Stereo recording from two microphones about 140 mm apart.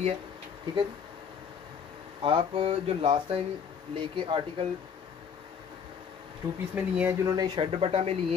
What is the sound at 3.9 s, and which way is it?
Speech, 35° right (ahead or behind).